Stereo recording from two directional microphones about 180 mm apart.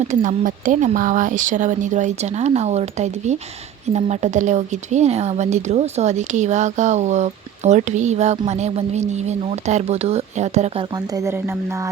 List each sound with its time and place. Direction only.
0.1 s a woman's voice: 45° right (ahead or behind)
10.9 s speech: 20° right (ahead or behind)